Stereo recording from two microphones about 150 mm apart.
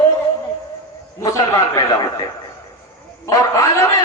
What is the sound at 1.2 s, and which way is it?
A man's voice, 20° left (ahead or behind).